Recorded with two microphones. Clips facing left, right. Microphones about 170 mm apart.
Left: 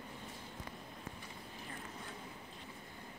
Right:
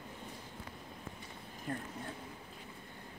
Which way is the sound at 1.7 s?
60° right (ahead or behind).